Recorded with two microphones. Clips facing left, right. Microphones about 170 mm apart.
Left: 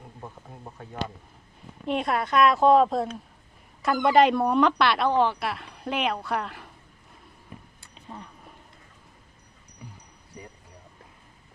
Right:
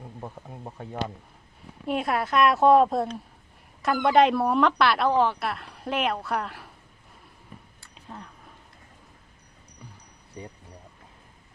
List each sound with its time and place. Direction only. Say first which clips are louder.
0.2 s speech: right 3 dB; 25° right (ahead or behind)
1.9 s speech: even; 5° right (ahead or behind)
7.9 s a sound: even; centre (ahead or behind)